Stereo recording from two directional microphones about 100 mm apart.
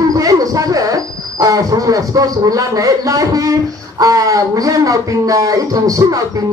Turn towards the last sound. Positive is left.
turn(degrees=-35)  # may be behind; listen again after turning